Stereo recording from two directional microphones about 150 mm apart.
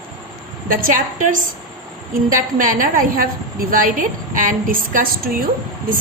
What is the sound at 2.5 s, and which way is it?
A woman's voice, 65° right (ahead or behind).